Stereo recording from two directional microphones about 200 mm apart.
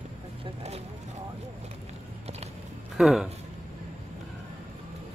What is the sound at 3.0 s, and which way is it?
Speech, centre (ahead or behind).